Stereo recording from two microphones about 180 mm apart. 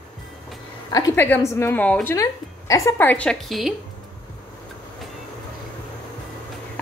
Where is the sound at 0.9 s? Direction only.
15° left (ahead or behind); by 3.7 s centre (ahead or behind).